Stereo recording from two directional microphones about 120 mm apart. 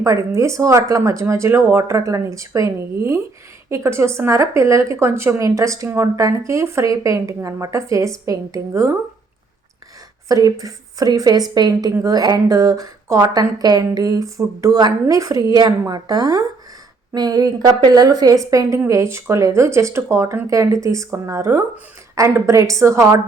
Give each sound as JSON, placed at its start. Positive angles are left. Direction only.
{"t": 0.0, "sound": "speech", "side_deg": -25}
{"t": 10.2, "sound": "a woman's voice", "side_deg": -30}